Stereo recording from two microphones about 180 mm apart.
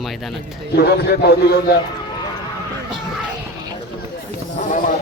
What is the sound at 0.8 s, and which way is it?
A man's voice, 60° left (ahead or behind).